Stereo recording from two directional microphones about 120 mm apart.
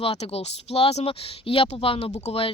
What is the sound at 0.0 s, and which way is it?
Speech, 55° left (ahead or behind).